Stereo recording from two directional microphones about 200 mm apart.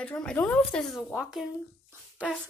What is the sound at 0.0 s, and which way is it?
Speech, 5° left (ahead or behind).